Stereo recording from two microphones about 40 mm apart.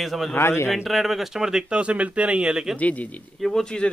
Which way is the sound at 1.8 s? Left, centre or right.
Right.